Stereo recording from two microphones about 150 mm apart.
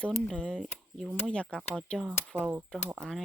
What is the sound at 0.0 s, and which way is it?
Speech, 5° left (ahead or behind).